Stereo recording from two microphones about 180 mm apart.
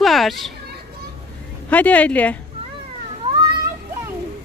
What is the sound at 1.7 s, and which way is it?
Speech, 10° left (ahead or behind).